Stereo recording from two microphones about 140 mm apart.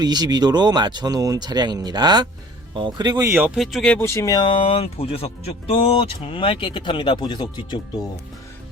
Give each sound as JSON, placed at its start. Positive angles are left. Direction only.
{"t": 0.0, "sound": "speech", "side_deg": -30}
{"t": 3.3, "sound": "speech", "side_deg": -5}
{"t": 3.9, "sound": "speech", "side_deg": 20}